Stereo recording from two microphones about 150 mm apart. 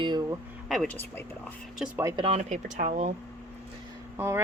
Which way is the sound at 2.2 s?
45° right (ahead or behind).